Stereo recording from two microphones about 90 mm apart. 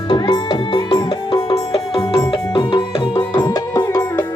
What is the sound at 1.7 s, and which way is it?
Music, 90° left.